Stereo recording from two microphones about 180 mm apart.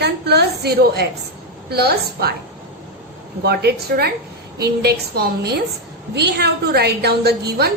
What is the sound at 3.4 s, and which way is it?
A woman's voice, 60° right (ahead or behind).